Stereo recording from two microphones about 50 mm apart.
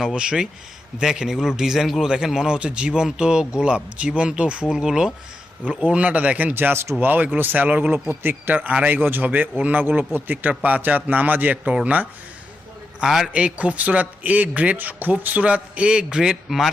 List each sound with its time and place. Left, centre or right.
0.1 s a man's voice: centre
4.7 s a man's voice: centre
5.6 s speech: right
6.5 s a man's voice: right
7.9 s a man's voice: right
8.5 s a man's voice: right
13.1 s a man's voice: centre
13.3 s speech: right
16.3 s speech: centre